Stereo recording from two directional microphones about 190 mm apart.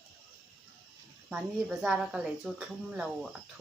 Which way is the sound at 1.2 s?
5° right (ahead or behind).